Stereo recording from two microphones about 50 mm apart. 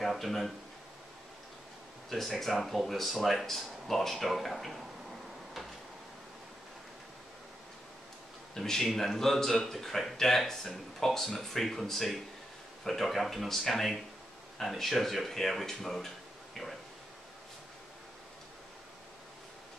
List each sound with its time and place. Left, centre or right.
0.0 s speech: centre
2.0 s speech: centre
8.5 s speech: centre